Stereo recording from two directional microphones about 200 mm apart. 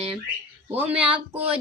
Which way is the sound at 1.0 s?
25° right (ahead or behind).